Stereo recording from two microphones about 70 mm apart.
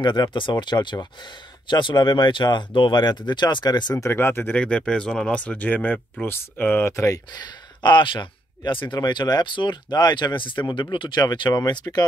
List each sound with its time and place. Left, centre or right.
0.0 s speech: left
4.0 s speech: left
4.6 s speech: centre
6.8 s speech: left
7.3 s speech: left